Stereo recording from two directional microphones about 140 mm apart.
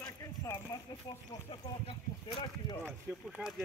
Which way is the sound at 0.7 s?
25° left (ahead or behind).